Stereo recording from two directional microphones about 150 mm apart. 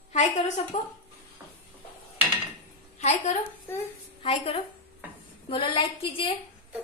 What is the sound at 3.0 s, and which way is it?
A woman's voice, 45° left (ahead or behind).